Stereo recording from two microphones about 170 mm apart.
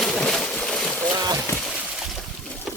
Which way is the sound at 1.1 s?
20° right (ahead or behind).